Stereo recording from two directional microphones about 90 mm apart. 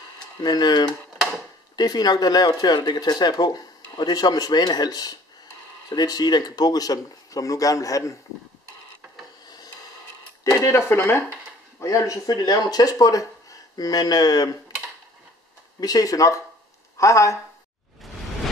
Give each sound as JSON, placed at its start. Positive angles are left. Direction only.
{"t": 0.4, "sound": "speech", "side_deg": 50}
{"t": 10.4, "sound": "speech", "side_deg": 35}
{"t": 15.8, "sound": "speech", "side_deg": 45}
{"t": 18.0, "sound": "whoosh", "side_deg": 0}